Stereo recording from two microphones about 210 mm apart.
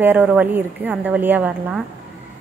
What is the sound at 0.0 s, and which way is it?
A woman's voice, 10° right (ahead or behind).